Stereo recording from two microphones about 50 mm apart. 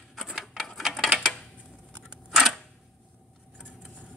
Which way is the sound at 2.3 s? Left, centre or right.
Centre.